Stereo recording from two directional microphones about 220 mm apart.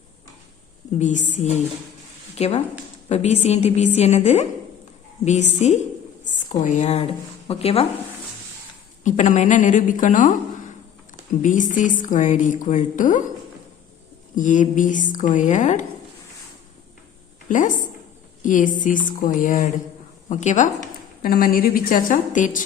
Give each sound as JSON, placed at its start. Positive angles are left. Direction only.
{"t": 0.9, "sound": "a woman's voice", "side_deg": 35}
{"t": 2.3, "sound": "a woman's voice", "side_deg": 30}
{"t": 9.0, "sound": "a woman's voice", "side_deg": 35}
{"t": 11.4, "sound": "a woman's voice", "side_deg": 35}
{"t": 14.3, "sound": "a woman's voice", "side_deg": 35}
{"t": 17.5, "sound": "a woman's voice", "side_deg": 35}